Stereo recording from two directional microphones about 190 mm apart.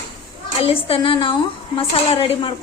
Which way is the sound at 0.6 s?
30° left (ahead or behind).